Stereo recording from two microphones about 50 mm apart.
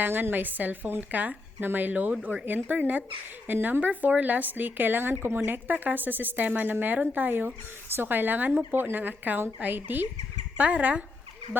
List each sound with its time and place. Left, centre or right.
0.0 s speech: right